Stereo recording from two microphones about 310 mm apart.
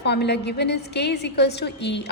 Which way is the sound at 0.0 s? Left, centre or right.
Left.